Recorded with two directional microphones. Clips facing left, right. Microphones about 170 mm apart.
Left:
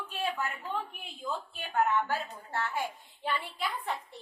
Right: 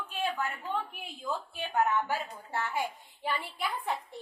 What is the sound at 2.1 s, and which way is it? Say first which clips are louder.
Speech: even; 15° right (ahead or behind).